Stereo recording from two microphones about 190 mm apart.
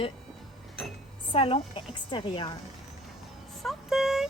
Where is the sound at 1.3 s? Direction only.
30° left (ahead or behind).